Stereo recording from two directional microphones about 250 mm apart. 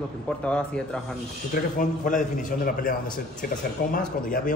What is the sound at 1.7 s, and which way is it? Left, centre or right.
A man's voice, left.